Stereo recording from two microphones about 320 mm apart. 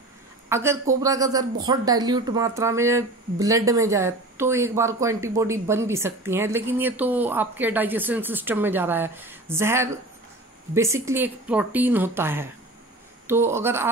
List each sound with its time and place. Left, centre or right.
0.5 s speech: centre